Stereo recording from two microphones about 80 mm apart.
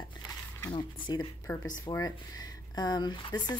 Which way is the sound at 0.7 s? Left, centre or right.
Left.